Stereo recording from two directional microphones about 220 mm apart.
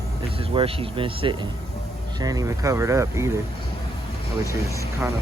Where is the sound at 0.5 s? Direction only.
25° right (ahead or behind).